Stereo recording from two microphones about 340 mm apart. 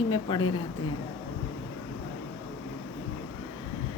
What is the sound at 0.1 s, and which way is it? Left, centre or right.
Speech, centre.